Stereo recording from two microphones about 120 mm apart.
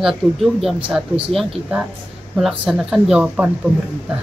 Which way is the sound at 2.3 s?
5° right (ahead or behind).